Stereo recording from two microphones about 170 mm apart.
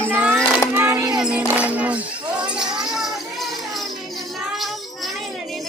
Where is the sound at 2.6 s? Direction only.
5° right (ahead or behind).